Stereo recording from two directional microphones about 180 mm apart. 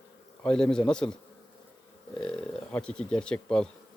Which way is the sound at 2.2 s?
5° left (ahead or behind).